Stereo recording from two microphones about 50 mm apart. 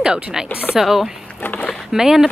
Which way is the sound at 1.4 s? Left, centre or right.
Left.